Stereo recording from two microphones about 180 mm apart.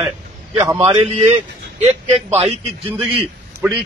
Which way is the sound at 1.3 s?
40° right (ahead or behind).